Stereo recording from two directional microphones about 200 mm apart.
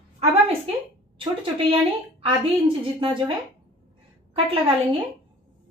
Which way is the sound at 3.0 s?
25° right (ahead or behind).